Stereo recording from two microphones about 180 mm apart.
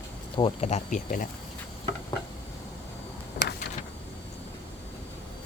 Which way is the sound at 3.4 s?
65° left (ahead or behind).